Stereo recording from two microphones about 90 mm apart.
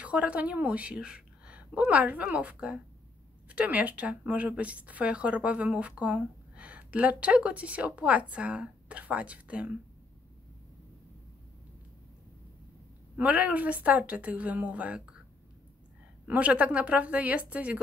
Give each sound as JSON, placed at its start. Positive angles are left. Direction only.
{"t": 0.0, "sound": "a woman's voice", "side_deg": -15}
{"t": 13.2, "sound": "speech", "side_deg": -15}
{"t": 16.3, "sound": "speech", "side_deg": -15}